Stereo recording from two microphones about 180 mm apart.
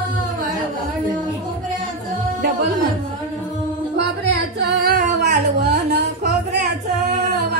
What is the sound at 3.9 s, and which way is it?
Singing, 70° right (ahead or behind).